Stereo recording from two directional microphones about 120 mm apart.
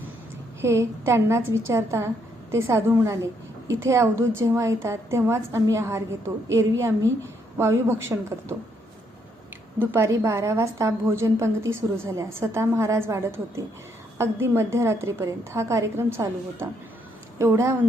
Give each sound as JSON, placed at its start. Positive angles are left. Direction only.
{"t": 0.6, "sound": "a woman's voice", "side_deg": -25}
{"t": 9.7, "sound": "a woman's voice", "side_deg": -20}